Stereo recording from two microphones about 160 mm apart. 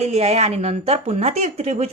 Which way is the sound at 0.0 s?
40° right (ahead or behind).